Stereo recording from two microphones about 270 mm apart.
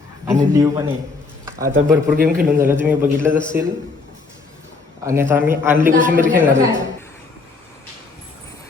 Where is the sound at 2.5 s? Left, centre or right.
Centre.